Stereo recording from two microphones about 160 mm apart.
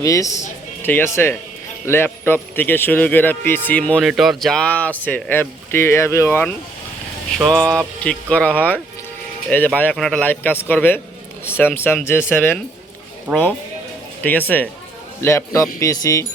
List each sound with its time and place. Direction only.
0.0 s speech: 20° left (ahead or behind)
7.3 s a sound: 5° left (ahead or behind)
8.0 s speech: 10° left (ahead or behind)
13.3 s speech: 15° right (ahead or behind)
14.2 s speech: 10° left (ahead or behind)